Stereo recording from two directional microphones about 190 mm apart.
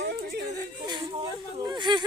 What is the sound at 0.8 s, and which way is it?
Speech, 25° right (ahead or behind).